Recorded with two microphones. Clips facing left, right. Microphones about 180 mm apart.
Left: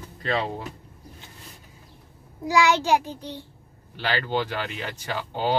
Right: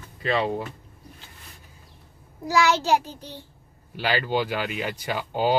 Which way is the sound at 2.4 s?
15° left (ahead or behind).